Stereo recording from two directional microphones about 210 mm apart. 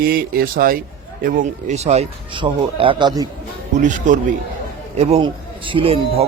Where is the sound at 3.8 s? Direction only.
35° right (ahead or behind).